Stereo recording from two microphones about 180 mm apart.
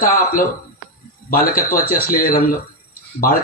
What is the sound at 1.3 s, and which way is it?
Speech, 50° left (ahead or behind).